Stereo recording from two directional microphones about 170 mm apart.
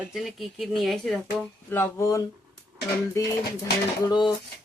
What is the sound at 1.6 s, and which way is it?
Speech, 15° left (ahead or behind).